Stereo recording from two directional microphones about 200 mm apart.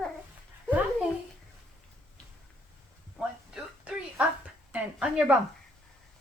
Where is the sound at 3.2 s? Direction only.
5° right (ahead or behind).